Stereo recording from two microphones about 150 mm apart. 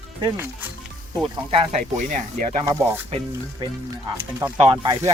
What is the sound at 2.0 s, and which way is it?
Speech, 60° right (ahead or behind).